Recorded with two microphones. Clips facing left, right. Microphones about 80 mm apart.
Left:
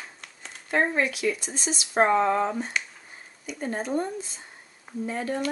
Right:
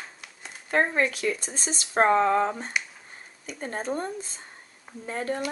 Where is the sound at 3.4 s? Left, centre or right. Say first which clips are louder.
Left 1 dB; right.